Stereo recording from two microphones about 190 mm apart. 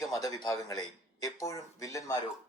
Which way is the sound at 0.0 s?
20° left (ahead or behind).